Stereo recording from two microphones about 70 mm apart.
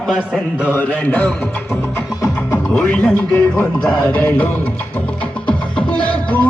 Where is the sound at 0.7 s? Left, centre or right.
Left.